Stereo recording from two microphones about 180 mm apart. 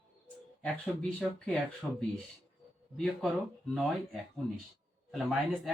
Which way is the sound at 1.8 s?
Centre (ahead or behind).